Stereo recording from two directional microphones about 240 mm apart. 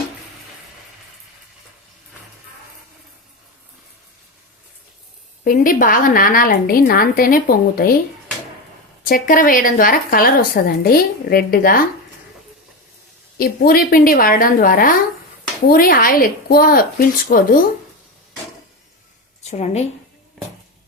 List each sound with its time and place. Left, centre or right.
5.5 s speech: left
9.0 s speech: left
13.4 s speech: left
19.4 s a woman's voice: left